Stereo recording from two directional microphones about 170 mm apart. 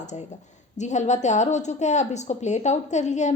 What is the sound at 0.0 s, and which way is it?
A woman's voice, 45° left (ahead or behind).